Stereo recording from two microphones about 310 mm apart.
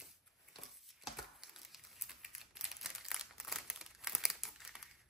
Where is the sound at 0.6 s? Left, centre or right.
Centre.